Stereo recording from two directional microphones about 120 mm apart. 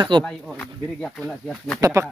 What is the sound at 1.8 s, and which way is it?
Speech, 25° right (ahead or behind).